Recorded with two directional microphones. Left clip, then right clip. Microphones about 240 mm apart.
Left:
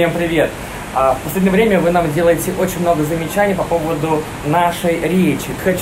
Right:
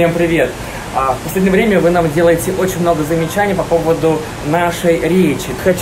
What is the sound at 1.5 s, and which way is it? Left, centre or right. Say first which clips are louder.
Speech: right 1 dB; centre.